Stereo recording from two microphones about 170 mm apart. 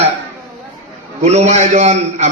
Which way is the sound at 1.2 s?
40° right (ahead or behind).